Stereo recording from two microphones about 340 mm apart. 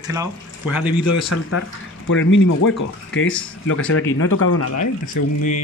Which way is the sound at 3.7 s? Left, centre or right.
Left.